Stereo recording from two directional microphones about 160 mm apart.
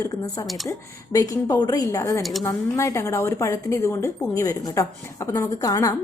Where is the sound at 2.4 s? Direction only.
15° left (ahead or behind).